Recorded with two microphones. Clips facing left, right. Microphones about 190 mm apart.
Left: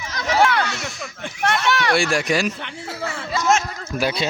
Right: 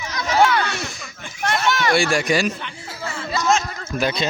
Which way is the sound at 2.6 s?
60° left (ahead or behind).